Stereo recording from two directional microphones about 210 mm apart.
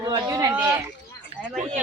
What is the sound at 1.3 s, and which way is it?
Speech, 30° right (ahead or behind).